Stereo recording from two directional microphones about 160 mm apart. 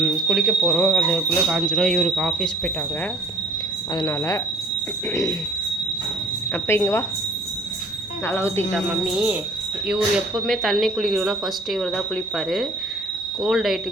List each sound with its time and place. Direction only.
0.0 s speech: centre (ahead or behind)
3.9 s speech: 20° left (ahead or behind)
6.5 s speech: 15° left (ahead or behind)
8.3 s speech: 15° left (ahead or behind)
8.7 s speech: 5° right (ahead or behind)